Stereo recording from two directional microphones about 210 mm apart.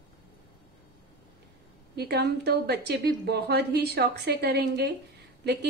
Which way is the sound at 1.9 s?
50° right (ahead or behind).